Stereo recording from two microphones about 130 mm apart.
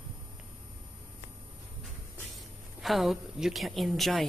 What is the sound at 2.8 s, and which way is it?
A man's voice, centre (ahead or behind).